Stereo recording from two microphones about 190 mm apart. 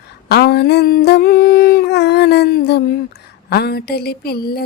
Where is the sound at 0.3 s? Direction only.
55° left (ahead or behind).